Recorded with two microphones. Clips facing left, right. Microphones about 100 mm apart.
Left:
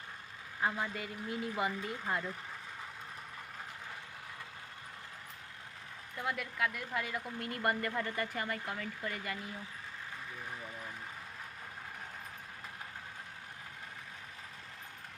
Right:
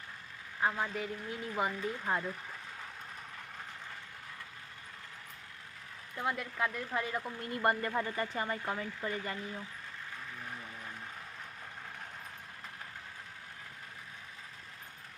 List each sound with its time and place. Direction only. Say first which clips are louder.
0.6 s speech: right 2 dB; centre (ahead or behind)
0.9 s speech: right 1 dB; 90° left
1.5 s speech: right 5 dB; 20° right (ahead or behind)
6.1 s speech: right 2 dB; 25° right (ahead or behind)